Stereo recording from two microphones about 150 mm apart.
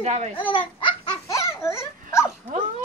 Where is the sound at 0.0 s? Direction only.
50° right (ahead or behind).